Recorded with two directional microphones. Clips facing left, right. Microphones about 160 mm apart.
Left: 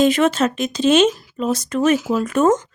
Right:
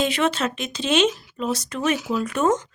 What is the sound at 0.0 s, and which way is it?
Speech, 45° left (ahead or behind).